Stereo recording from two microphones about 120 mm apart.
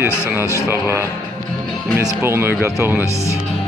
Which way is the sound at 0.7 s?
20° right (ahead or behind).